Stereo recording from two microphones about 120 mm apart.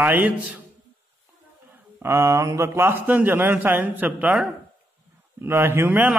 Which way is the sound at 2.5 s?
20° right (ahead or behind).